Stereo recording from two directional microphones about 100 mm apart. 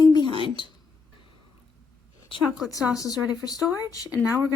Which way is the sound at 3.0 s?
40° left (ahead or behind).